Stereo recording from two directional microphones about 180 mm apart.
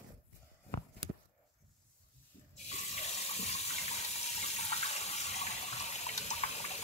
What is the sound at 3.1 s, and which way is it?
Water, 35° left (ahead or behind).